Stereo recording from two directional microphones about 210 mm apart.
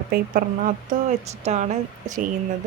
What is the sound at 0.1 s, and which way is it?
Speech, 45° right (ahead or behind).